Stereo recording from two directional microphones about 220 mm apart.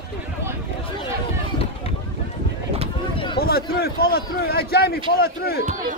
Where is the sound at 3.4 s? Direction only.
45° left (ahead or behind).